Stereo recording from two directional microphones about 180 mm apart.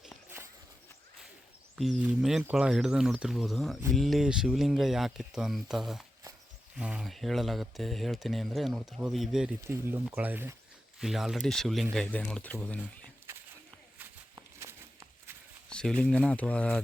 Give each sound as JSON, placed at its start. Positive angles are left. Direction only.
{"t": 1.7, "sound": "speech", "side_deg": -5}
{"t": 9.6, "sound": "speech", "side_deg": -15}
{"t": 13.3, "sound": "a sound", "side_deg": -15}
{"t": 15.7, "sound": "speech", "side_deg": 5}